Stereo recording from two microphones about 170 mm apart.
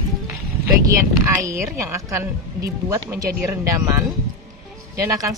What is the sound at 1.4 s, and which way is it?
Speech, 15° right (ahead or behind).